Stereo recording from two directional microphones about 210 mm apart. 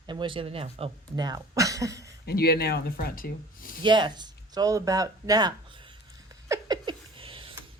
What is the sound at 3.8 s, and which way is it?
Speech, 20° right (ahead or behind).